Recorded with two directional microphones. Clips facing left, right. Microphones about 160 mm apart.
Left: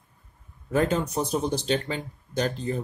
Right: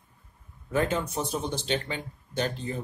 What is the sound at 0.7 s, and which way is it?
Speech, 40° left (ahead or behind).